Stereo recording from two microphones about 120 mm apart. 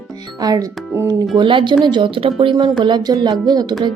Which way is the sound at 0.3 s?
35° right (ahead or behind).